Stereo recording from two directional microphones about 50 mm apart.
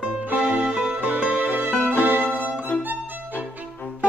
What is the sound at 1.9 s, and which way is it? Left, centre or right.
Violin, right.